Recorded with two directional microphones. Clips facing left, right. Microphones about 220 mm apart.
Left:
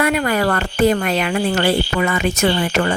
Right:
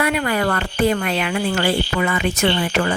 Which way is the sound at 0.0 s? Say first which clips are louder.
Left 2 dB; 45° left (ahead or behind).